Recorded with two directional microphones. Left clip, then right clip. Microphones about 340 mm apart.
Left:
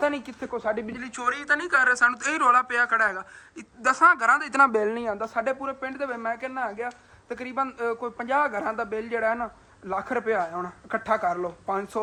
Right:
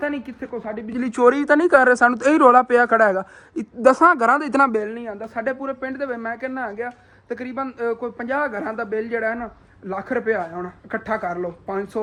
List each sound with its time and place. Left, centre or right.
0.0 s speech: centre
0.9 s speech: centre
4.7 s a man's voice: centre
5.2 s speech: centre